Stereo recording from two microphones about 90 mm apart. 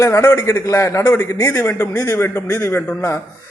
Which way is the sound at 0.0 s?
35° left (ahead or behind).